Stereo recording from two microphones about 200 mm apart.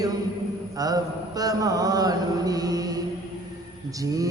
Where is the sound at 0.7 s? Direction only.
20° right (ahead or behind).